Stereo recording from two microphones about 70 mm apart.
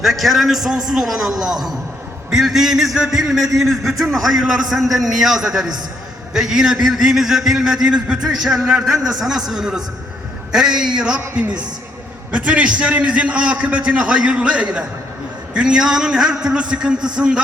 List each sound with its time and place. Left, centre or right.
0.0 s a man's voice: centre